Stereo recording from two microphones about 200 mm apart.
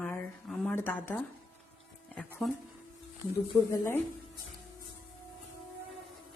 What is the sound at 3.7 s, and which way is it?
Speech, 15° left (ahead or behind).